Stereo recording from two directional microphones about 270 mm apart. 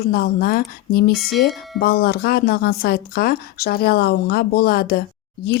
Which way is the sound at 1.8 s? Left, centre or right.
Left.